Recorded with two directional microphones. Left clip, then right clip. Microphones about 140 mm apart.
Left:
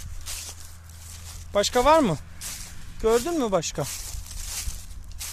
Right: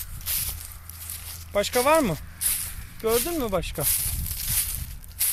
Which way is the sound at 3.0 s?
45° left (ahead or behind).